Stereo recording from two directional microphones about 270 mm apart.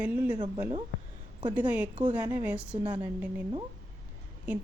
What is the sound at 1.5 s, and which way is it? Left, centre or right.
A woman's voice, centre.